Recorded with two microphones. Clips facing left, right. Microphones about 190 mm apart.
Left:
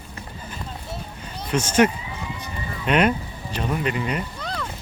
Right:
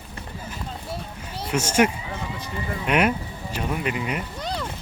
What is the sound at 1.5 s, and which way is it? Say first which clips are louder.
Speech: left 2 dB; 10° right (ahead or behind).